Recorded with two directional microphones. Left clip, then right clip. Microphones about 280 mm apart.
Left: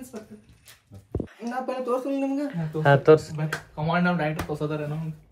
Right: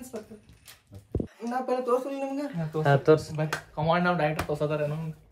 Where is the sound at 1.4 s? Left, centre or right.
Left.